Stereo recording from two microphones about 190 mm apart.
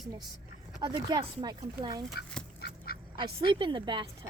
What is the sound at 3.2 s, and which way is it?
Speech, 25° right (ahead or behind).